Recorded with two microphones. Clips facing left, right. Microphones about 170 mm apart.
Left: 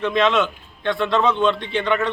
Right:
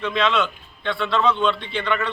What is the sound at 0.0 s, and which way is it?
A man's voice, 15° left (ahead or behind).